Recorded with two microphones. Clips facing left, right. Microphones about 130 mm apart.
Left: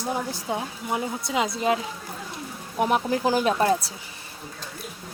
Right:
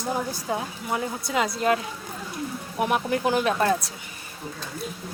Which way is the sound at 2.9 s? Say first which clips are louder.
Even; 30° left (ahead or behind).